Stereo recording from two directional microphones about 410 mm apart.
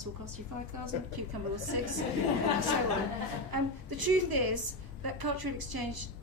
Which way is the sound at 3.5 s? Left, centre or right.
Right.